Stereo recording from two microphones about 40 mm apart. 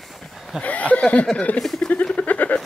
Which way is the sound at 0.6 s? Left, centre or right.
Left.